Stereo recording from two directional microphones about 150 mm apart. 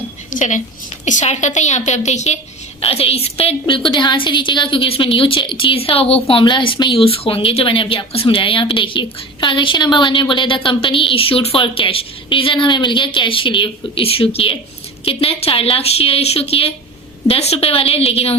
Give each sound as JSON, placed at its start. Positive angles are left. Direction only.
{"t": 0.3, "sound": "a woman's voice", "side_deg": 55}